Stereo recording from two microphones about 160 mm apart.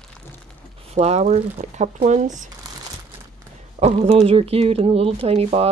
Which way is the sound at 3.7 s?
40° right (ahead or behind).